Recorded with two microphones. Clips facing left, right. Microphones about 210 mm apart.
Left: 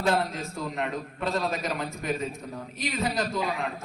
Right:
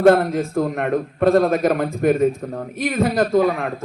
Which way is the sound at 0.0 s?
55° right (ahead or behind).